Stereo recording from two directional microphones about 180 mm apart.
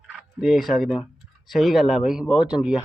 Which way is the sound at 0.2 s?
Centre (ahead or behind).